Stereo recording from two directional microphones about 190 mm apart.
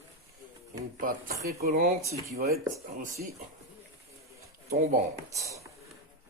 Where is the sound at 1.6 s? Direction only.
50° right (ahead or behind).